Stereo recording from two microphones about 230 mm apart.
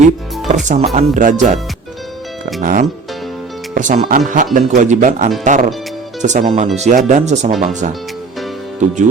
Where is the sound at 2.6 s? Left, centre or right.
Right.